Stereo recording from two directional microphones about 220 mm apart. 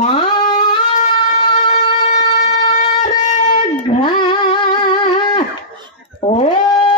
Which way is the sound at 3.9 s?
20° left (ahead or behind).